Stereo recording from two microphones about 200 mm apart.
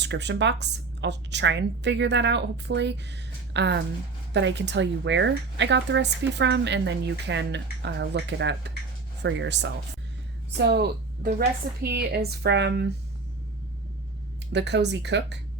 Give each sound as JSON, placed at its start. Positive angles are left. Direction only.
{"t": 0.0, "sound": "speech", "side_deg": -60}
{"t": 14.5, "sound": "speech", "side_deg": -60}